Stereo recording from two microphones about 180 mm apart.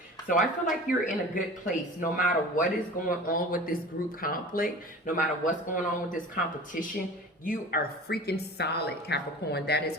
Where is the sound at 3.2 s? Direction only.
50° left (ahead or behind).